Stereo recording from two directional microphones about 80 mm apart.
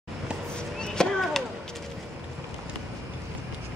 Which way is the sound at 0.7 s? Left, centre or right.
Centre.